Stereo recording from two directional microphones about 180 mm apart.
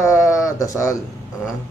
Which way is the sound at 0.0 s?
15° left (ahead or behind).